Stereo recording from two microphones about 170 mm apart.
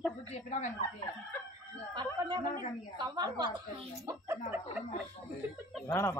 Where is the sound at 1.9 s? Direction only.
25° right (ahead or behind).